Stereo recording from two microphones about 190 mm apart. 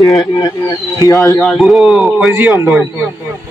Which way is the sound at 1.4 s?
Centre (ahead or behind).